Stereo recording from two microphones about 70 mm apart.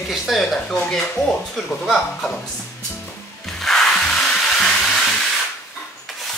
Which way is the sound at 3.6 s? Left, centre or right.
Centre.